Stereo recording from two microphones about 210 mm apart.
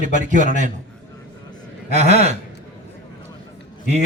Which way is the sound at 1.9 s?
30° right (ahead or behind).